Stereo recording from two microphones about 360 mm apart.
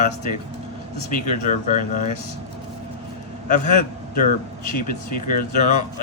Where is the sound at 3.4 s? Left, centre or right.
Left.